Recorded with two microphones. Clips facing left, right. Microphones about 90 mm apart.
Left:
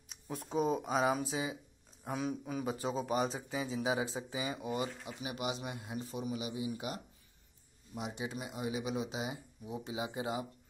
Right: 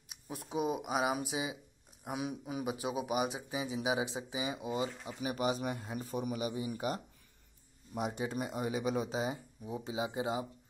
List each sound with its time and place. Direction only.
0.1 s speech: 5° right (ahead or behind)
5.2 s speech: 40° right (ahead or behind)
9.8 s speech: 25° right (ahead or behind)